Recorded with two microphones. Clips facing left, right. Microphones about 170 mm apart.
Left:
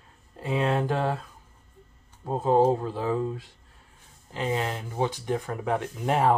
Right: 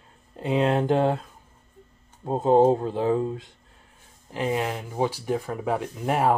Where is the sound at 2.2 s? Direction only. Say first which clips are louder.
Right 3 dB; 20° right (ahead or behind).